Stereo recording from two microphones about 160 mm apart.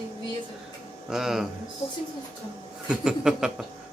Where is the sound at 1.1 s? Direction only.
5° right (ahead or behind).